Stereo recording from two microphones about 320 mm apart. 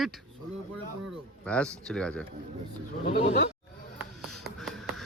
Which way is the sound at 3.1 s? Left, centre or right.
Left.